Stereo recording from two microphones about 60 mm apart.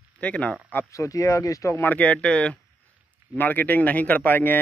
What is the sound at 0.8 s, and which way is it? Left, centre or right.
Speech, left.